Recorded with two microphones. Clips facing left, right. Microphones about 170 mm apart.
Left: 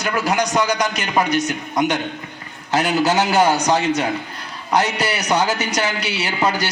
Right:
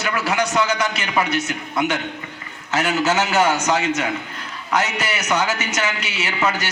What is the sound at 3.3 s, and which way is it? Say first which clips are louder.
A man's voice: left 2 dB; 35° left (ahead or behind).